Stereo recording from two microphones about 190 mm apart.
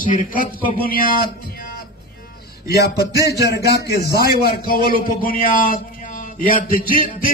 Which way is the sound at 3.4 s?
60° left (ahead or behind).